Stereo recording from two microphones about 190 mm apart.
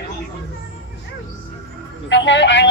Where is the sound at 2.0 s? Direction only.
70° left (ahead or behind).